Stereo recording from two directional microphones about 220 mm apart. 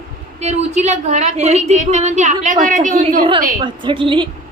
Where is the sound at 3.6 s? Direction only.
20° right (ahead or behind).